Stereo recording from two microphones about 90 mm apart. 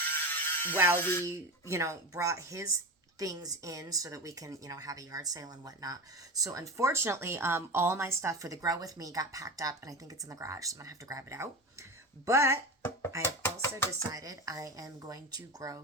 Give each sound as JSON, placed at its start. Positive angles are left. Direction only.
{"t": 0.0, "sound": "mechanisms", "side_deg": 25}
{"t": 0.9, "sound": "speech", "side_deg": 25}
{"t": 1.2, "sound": "a woman's voice", "side_deg": -35}
{"t": 13.2, "sound": "speech", "side_deg": 25}
{"t": 14.1, "sound": "a woman's voice", "side_deg": -40}